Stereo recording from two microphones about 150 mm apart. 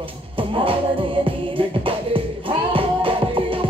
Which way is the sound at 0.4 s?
35° right (ahead or behind).